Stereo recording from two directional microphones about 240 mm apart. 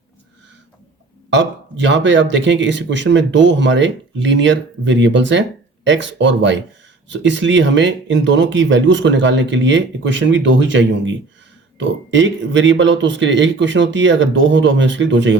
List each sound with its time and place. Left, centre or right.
1.3 s speech: right